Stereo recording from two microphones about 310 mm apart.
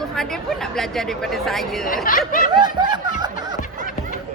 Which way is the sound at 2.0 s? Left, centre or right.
Left.